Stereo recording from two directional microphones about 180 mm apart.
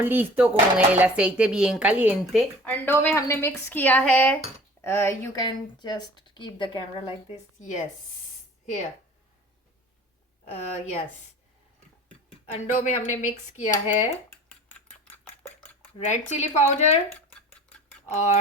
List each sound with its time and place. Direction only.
0.0 s speech: 10° right (ahead or behind)
2.6 s speech: 10° left (ahead or behind)
7.6 s speech: 45° left (ahead or behind)
10.4 s speech: 40° left (ahead or behind)
12.5 s speech: 40° left (ahead or behind)
14.5 s cutlery: 10° left (ahead or behind)
16.0 s speech: 40° left (ahead or behind)